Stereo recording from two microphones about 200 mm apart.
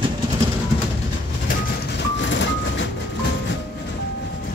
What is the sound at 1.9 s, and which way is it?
Vehicle, 60° left (ahead or behind).